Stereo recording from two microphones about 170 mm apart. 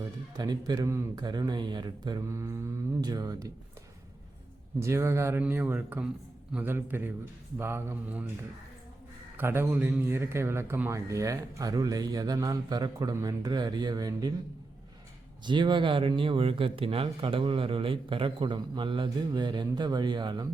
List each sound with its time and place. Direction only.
0.3 s speech: 25° right (ahead or behind)
4.8 s speech: 15° right (ahead or behind)
9.4 s speech: 15° right (ahead or behind)
15.4 s speech: 25° right (ahead or behind)